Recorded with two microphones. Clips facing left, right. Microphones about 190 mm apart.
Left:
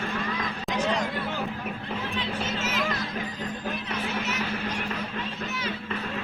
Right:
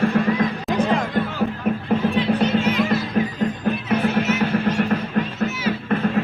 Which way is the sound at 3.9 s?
55° right (ahead or behind).